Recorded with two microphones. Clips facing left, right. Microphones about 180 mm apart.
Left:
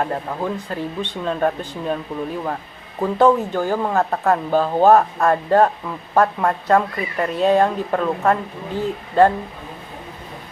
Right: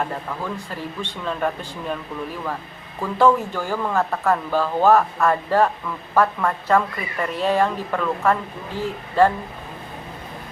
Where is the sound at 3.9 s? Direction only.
35° left (ahead or behind).